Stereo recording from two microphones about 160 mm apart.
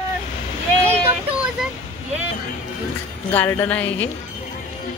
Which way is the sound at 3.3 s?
10° left (ahead or behind).